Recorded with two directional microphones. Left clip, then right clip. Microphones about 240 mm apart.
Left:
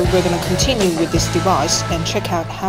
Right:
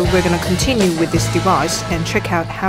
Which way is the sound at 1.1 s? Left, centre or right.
Right.